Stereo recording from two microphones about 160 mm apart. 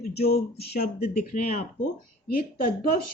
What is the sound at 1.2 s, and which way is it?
Speech, 45° left (ahead or behind).